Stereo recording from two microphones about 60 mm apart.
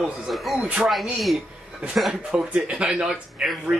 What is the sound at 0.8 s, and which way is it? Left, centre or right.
Speech, centre.